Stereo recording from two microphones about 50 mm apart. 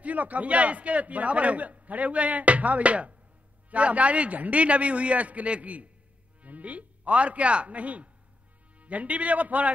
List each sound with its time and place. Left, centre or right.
0.0 s a man's voice: right